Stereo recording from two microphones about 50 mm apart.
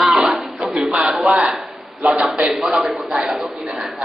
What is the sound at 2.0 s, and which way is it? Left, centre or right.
Speech, right.